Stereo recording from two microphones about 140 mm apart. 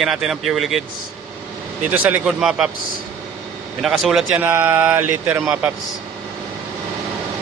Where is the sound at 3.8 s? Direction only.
Centre (ahead or behind).